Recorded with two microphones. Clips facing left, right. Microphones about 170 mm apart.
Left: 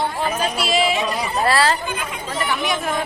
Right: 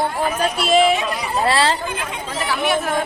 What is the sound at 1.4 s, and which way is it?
Speech, 25° right (ahead or behind).